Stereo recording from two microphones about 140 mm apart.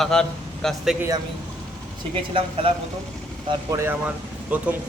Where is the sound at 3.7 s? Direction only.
20° right (ahead or behind).